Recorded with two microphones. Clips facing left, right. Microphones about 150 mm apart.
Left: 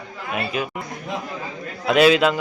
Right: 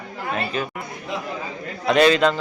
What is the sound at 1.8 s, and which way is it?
Speech, 5° left (ahead or behind).